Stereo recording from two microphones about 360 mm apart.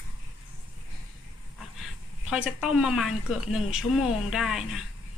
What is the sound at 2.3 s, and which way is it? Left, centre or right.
Speech, centre.